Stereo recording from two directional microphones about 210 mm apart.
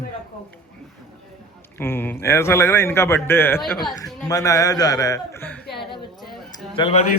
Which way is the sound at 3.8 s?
Centre (ahead or behind).